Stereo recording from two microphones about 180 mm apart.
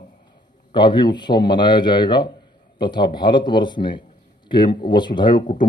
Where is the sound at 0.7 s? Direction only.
25° left (ahead or behind).